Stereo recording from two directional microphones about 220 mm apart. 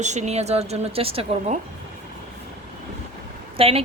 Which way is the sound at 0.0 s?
30° right (ahead or behind).